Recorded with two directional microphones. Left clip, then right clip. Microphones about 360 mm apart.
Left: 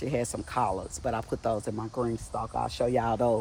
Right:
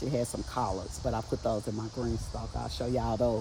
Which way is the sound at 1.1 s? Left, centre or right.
Centre.